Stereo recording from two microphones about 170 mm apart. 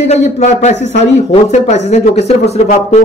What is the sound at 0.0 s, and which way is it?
A man's voice, 40° left (ahead or behind).